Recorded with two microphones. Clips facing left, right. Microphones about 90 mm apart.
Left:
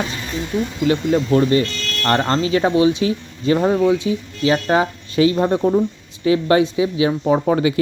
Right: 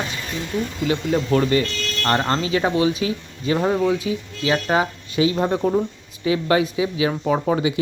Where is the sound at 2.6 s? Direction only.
25° left (ahead or behind).